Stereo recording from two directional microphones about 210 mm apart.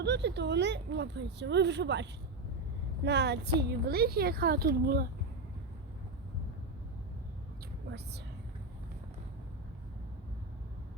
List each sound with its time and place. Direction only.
0.0 s a woman's voice: 55° right (ahead or behind)